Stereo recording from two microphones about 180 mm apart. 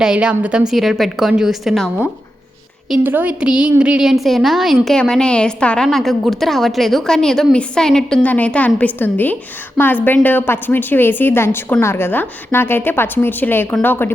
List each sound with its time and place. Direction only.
0.0 s a woman's voice: 5° right (ahead or behind)
2.9 s a woman's voice: 10° right (ahead or behind); by 14.1 s 10° left (ahead or behind)